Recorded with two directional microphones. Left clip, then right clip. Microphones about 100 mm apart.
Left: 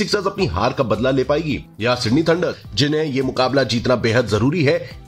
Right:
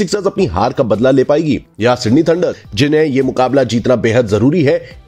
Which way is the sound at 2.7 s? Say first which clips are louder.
Right 8 dB; 90° right.